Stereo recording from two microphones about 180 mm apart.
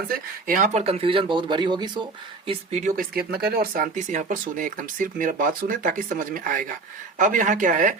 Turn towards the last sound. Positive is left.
turn(degrees=-45)  # may be behind; listen again after turning